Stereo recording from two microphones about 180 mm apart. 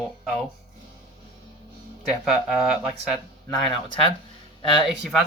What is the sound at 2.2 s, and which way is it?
Speech, 5° right (ahead or behind).